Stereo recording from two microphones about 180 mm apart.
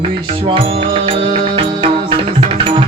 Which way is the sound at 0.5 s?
30° right (ahead or behind).